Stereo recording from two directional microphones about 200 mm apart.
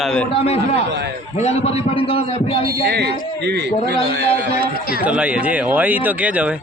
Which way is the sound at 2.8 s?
55° right (ahead or behind).